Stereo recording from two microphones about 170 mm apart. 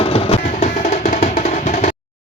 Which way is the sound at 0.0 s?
35° left (ahead or behind).